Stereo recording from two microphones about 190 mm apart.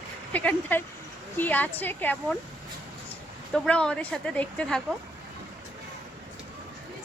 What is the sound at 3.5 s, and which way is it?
Speech, 5° left (ahead or behind).